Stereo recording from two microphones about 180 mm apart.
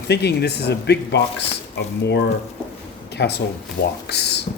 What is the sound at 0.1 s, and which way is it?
Speech, 65° left (ahead or behind).